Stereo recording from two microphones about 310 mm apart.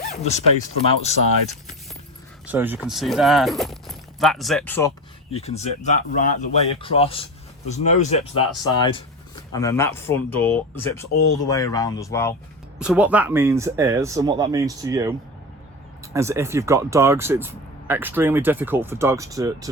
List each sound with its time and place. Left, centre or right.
0.1 s speech: left
2.5 s speech: centre
5.3 s speech: centre
12.8 s speech: centre
16.1 s speech: centre